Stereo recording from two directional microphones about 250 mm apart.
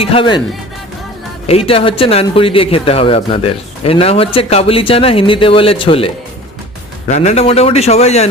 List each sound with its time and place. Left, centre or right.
0.0 s speech: left
1.5 s speech: left
7.1 s speech: left